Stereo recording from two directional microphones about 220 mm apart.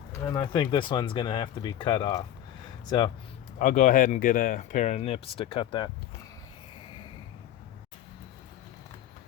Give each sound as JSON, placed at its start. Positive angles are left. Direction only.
{"t": 0.3, "sound": "speech", "side_deg": 15}
{"t": 3.6, "sound": "speech", "side_deg": 35}